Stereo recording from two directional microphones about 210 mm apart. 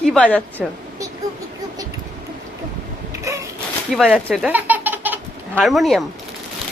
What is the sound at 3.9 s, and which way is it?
Speech, centre (ahead or behind).